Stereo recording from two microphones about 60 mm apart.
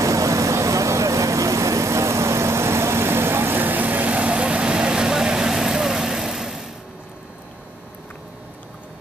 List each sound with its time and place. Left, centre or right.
0.0 s vehicle: right; by 6.7 s centre